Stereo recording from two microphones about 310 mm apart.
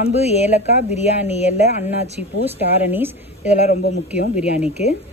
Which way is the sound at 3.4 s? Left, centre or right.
Left.